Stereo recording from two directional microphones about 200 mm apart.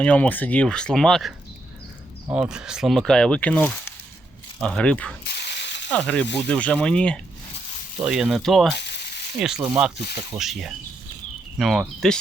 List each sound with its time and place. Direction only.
0.0 s speech: 5° left (ahead or behind)
2.3 s speech: 5° right (ahead or behind)
5.3 s mechanisms: 55° left (ahead or behind)
5.9 s speech: 5° left (ahead or behind)
8.7 s a sound: 60° left (ahead or behind)
9.6 s speech: 15° right (ahead or behind)
10.3 s speech: centre (ahead or behind)